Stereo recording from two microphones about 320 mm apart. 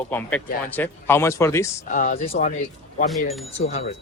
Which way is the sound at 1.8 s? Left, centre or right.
Left.